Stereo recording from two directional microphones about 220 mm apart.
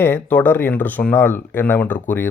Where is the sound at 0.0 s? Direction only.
10° left (ahead or behind).